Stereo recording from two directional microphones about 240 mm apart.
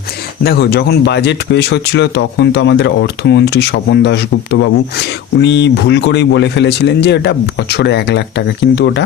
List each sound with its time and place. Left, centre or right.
0.4 s speech: left